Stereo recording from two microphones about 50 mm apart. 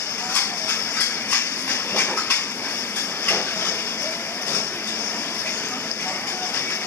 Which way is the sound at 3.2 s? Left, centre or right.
Left.